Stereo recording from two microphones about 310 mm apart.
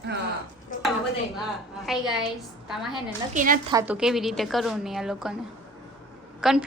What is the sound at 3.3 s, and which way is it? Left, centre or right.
Speech, right.